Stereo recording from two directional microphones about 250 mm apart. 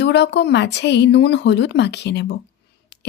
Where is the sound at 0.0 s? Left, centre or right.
Left.